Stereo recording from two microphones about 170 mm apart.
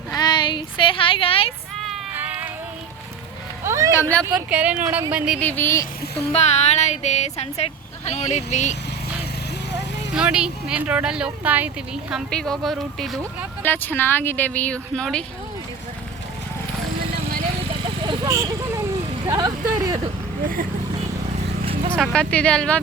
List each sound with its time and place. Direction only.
0.1 s a sound: 25° left (ahead or behind)
2.1 s music: 10° right (ahead or behind)
3.6 s vehicle: 15° right (ahead or behind)
4.4 s speech: 5° right (ahead or behind)
5.4 s speech: 10° left (ahead or behind)
6.1 s speech: 40° left (ahead or behind)
10.2 s speech: 5° right (ahead or behind)
12.1 s speech: 5° left (ahead or behind)
13.6 s speech: 10° left (ahead or behind)
17.8 s vehicle: 30° right (ahead or behind)
21.9 s speech: 5° left (ahead or behind)